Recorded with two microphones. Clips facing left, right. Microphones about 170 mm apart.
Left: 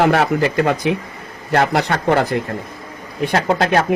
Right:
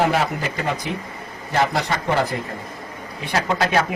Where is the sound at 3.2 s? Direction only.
55° left (ahead or behind).